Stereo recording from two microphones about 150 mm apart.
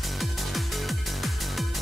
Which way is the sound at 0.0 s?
Centre (ahead or behind).